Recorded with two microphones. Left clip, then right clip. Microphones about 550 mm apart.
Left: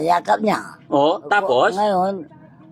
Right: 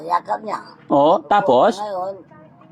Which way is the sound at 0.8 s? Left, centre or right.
Right.